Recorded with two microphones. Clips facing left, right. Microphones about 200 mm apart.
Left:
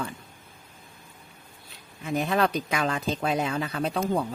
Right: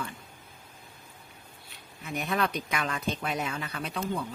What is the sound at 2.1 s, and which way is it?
Speech, 30° left (ahead or behind).